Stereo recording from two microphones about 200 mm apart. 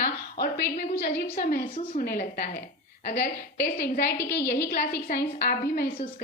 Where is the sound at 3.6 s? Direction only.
50° left (ahead or behind).